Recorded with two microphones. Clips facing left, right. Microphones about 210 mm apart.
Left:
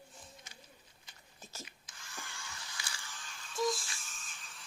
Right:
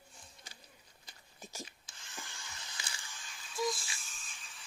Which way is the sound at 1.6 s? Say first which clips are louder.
Left 2 dB; 25° right (ahead or behind).